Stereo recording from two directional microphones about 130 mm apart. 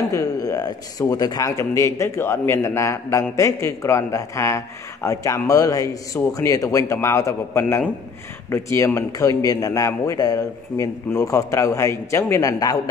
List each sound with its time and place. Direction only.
0.1 s a man's voice: 25° left (ahead or behind)